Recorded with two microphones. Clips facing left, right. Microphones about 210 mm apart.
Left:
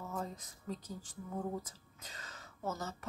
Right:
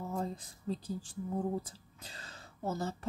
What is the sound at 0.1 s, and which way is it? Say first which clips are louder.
Speech: right 4 dB; 30° right (ahead or behind).